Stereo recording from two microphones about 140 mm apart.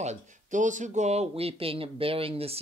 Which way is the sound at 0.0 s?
60° right (ahead or behind).